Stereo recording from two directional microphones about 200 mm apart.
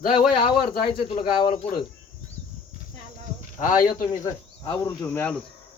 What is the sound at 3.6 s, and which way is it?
Speech, 45° left (ahead or behind).